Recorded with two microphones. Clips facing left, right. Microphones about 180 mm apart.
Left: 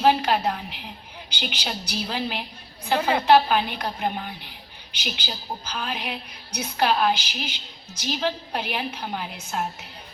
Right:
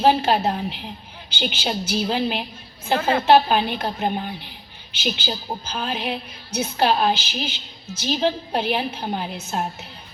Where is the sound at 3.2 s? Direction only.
25° right (ahead or behind).